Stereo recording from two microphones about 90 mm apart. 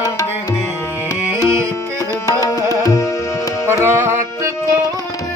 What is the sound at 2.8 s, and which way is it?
Tabla, 35° left (ahead or behind).